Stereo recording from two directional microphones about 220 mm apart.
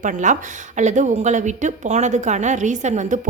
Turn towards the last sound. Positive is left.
turn(degrees=-35)  # may be behind; listen again after turning